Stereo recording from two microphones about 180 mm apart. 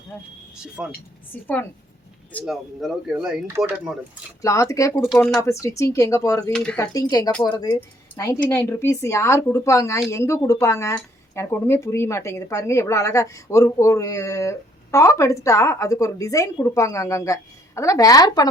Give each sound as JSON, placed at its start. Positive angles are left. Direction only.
{"t": 0.5, "sound": "speech", "side_deg": -5}
{"t": 1.3, "sound": "speech", "side_deg": 10}
{"t": 2.3, "sound": "speech", "side_deg": 0}
{"t": 4.4, "sound": "speech", "side_deg": 15}
{"t": 6.5, "sound": "speech", "side_deg": 0}
{"t": 6.7, "sound": "speech", "side_deg": 20}
{"t": 7.7, "sound": "speech", "side_deg": 10}